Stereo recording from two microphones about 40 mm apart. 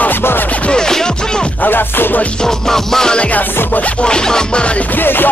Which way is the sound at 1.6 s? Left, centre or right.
Left.